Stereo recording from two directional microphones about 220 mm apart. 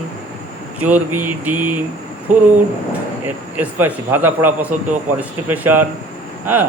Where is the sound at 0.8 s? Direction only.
5° right (ahead or behind).